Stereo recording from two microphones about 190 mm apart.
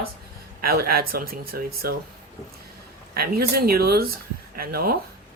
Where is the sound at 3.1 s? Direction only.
55° right (ahead or behind).